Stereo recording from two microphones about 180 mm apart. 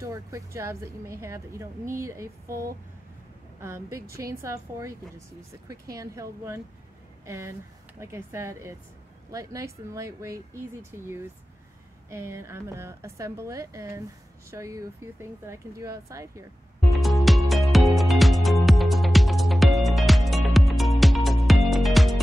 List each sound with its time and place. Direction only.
0.0 s speech: 15° right (ahead or behind)
16.9 s music: centre (ahead or behind)